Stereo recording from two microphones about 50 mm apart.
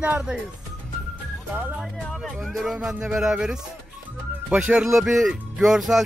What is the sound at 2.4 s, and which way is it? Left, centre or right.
Speech, centre.